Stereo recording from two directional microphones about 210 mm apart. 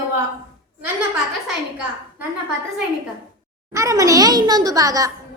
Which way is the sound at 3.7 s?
15° right (ahead or behind).